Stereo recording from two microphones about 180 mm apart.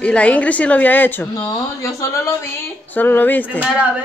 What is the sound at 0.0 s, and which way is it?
A woman's voice, 5° left (ahead or behind).